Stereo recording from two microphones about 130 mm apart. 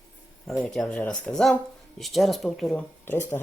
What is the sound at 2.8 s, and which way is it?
Speech, 15° left (ahead or behind).